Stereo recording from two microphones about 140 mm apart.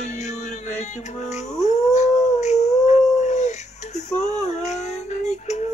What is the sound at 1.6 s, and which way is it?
Howl, 55° left (ahead or behind).